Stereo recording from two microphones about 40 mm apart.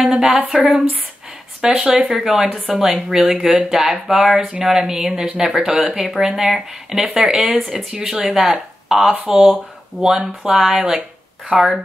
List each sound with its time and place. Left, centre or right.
0.5 s speech: centre
3.2 s speech: right
3.5 s speech: centre
9.1 s speech: right
9.9 s speech: centre